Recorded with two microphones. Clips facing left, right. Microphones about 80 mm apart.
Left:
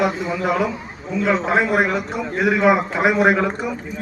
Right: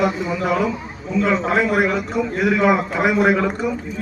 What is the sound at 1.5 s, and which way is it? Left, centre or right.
Speech, left.